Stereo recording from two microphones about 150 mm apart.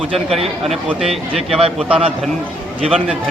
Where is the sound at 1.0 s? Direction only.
40° right (ahead or behind).